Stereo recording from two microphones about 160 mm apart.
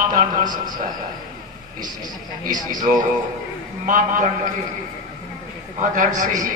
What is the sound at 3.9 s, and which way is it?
Speech, 55° right (ahead or behind).